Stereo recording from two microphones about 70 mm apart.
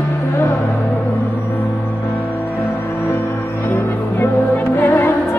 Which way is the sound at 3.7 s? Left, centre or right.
Left.